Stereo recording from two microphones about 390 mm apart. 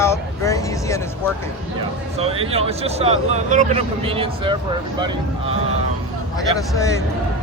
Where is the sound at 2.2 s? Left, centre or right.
Centre.